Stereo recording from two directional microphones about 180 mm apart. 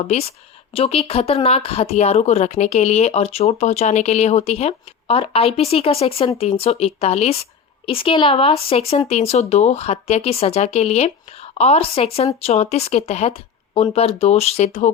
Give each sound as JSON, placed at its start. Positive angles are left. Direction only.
{"t": 0.0, "sound": "speech", "side_deg": 35}